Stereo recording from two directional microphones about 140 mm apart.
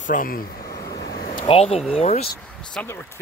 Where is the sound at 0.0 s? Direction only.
75° left (ahead or behind).